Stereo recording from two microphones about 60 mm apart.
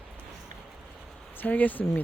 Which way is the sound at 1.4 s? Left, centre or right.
Left.